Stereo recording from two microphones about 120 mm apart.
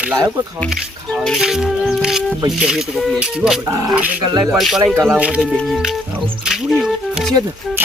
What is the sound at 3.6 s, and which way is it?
Speech, 25° right (ahead or behind).